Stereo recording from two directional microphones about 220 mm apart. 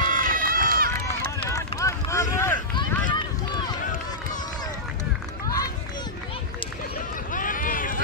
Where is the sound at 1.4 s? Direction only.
15° left (ahead or behind).